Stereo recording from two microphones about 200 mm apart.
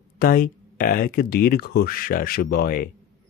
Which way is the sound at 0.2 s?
45° left (ahead or behind).